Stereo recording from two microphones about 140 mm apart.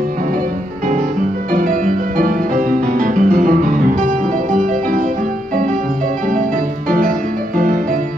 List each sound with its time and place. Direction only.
1.5 s music: 80° right
7.5 s music: 80° right